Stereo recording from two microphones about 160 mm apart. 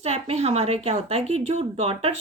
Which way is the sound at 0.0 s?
40° right (ahead or behind).